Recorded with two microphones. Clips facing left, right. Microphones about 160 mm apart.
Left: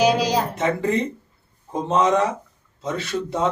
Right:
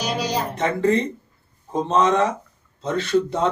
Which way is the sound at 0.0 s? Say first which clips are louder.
Left 7 dB; 90° left.